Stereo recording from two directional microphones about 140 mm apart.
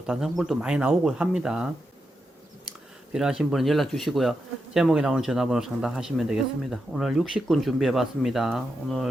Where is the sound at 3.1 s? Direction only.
5° right (ahead or behind).